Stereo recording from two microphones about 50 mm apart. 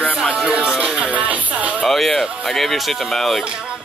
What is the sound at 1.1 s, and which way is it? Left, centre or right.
Music, right.